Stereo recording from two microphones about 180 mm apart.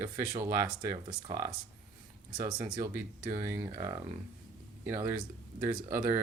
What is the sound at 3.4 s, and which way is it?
Speech, 20° right (ahead or behind).